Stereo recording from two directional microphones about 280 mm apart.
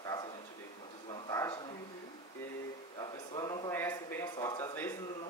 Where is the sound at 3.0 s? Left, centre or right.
Centre.